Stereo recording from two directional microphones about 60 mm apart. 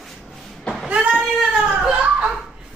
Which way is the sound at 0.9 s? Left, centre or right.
Centre.